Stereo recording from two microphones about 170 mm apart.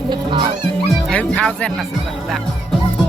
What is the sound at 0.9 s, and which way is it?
Music, 5° left (ahead or behind).